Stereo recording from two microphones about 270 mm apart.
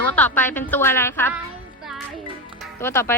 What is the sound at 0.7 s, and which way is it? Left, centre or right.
Speech, centre.